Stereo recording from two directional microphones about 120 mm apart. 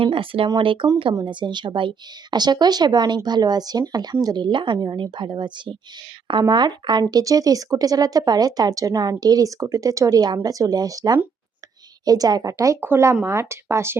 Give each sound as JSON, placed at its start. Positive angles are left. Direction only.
{"t": 0.0, "sound": "speech", "side_deg": -50}